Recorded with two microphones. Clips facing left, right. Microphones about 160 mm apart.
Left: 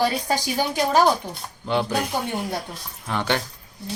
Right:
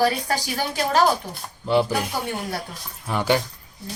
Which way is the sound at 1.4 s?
5° right (ahead or behind).